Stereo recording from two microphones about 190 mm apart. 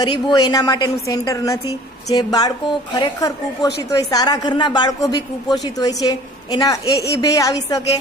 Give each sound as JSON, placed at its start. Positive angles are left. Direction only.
{"t": 0.0, "sound": "a woman's voice", "side_deg": 25}